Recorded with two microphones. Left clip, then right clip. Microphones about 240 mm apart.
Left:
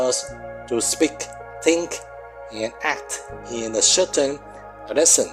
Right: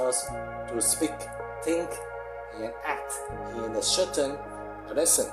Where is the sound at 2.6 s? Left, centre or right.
Left.